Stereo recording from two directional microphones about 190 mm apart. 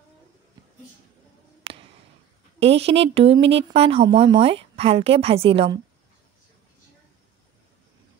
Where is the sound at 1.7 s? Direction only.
30° right (ahead or behind).